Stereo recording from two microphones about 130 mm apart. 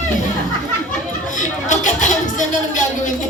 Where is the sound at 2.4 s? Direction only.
75° left (ahead or behind).